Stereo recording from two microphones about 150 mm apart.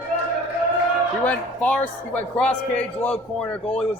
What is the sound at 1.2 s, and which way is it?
A man's voice, 10° left (ahead or behind).